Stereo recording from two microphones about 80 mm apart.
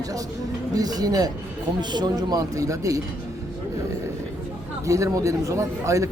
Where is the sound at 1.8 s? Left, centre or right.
Right.